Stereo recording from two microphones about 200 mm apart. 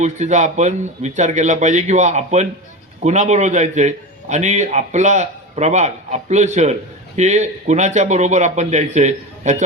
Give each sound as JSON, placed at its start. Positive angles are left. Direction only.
{"t": 0.0, "sound": "a man's voice", "side_deg": -35}